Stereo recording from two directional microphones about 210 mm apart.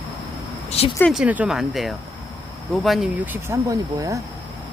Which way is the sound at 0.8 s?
30° left (ahead or behind).